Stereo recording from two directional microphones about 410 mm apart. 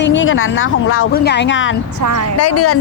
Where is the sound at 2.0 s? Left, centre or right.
Right.